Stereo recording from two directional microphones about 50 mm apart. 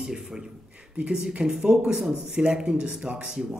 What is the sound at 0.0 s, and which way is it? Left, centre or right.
A man's voice, centre.